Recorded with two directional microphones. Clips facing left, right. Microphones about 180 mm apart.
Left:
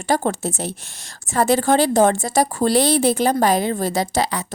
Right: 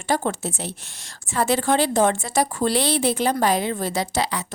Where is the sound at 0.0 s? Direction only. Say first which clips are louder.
Left 3 dB; 40° left (ahead or behind).